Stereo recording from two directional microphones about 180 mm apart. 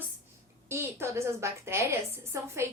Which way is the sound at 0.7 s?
15° right (ahead or behind).